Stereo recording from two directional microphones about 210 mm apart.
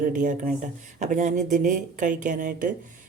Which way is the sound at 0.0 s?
40° right (ahead or behind).